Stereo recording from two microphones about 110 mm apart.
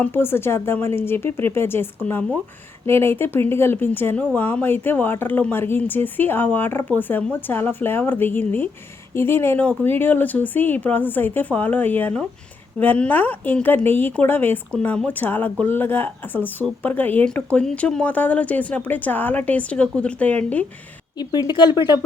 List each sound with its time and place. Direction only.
0.0 s speech: 20° left (ahead or behind)
21.2 s speech: 40° left (ahead or behind)